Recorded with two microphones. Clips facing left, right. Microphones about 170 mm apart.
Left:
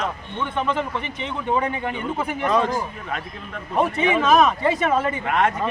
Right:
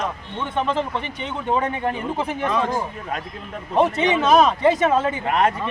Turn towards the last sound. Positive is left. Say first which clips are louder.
# right 1 dB
turn(degrees=-30)  # may be behind; listen again after turning